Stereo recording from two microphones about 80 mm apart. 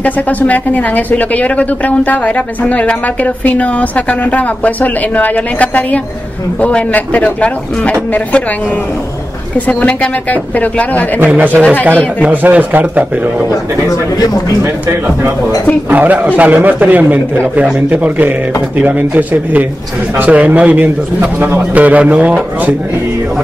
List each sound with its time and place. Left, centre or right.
0.0 s speech: centre
9.7 s speech: centre
11.2 s a man's voice: right
14.6 s speech: right
15.9 s a man's voice: right